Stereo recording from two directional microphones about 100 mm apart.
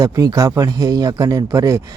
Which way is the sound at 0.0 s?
35° right (ahead or behind).